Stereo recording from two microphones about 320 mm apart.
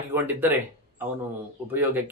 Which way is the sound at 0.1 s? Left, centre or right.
Centre.